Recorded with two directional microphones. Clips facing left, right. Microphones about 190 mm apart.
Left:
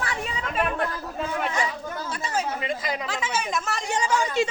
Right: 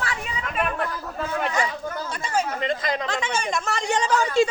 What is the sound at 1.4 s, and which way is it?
Speech, centre (ahead or behind).